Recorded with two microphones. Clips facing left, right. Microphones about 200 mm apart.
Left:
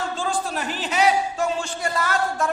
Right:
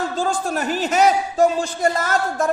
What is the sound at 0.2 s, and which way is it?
A man's voice, 45° right (ahead or behind).